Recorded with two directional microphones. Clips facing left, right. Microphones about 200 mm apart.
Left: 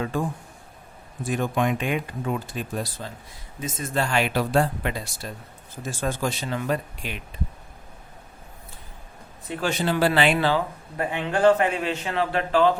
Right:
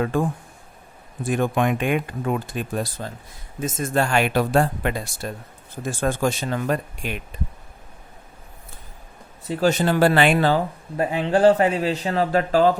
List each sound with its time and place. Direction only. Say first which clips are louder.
0.0 s speech: right 4 dB; 55° right (ahead or behind)
9.5 s speech: right 5 dB; 40° right (ahead or behind)